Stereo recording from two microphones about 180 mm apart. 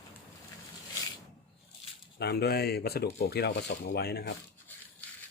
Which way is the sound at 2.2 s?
65° left (ahead or behind).